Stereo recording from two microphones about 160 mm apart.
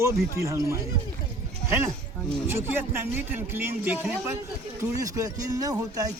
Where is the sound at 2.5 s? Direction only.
15° right (ahead or behind).